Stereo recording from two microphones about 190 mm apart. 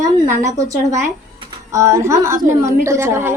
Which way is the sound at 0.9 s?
15° right (ahead or behind).